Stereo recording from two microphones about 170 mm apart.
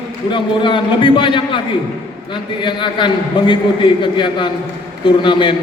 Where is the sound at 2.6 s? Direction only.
30° left (ahead or behind).